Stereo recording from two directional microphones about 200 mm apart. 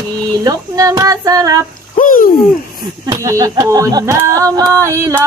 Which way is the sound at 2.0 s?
45° left (ahead or behind).